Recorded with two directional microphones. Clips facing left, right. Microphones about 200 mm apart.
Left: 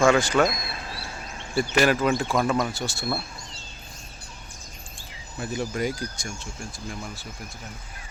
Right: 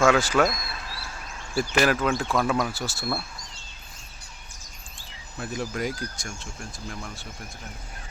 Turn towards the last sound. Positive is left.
turn(degrees=0)  # may be behind; listen again after turning